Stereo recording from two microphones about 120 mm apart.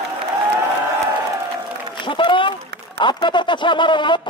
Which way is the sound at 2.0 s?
45° left (ahead or behind).